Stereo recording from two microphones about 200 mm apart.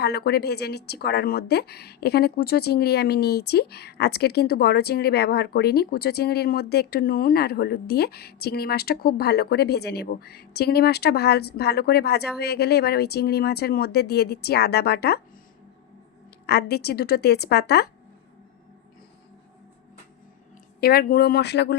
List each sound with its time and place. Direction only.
0.0 s speech: 55° left (ahead or behind)
16.5 s speech: 55° left (ahead or behind)
20.8 s speech: 50° left (ahead or behind)